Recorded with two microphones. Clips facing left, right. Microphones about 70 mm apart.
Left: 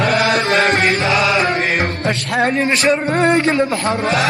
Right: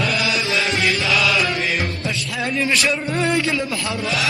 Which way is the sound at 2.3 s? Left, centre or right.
Left.